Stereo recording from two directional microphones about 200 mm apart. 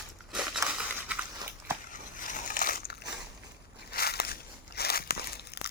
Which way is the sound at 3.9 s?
50° left (ahead or behind).